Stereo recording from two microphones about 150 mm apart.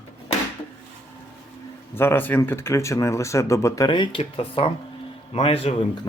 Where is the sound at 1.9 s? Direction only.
15° left (ahead or behind); by 5.8 s 40° left (ahead or behind).